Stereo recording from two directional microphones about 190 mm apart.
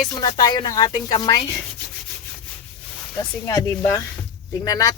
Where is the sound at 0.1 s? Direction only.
25° left (ahead or behind).